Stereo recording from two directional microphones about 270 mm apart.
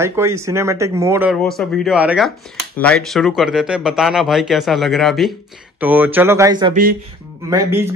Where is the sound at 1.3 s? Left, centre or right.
Centre.